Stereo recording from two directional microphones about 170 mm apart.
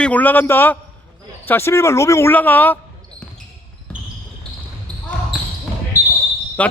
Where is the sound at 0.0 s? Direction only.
10° left (ahead or behind).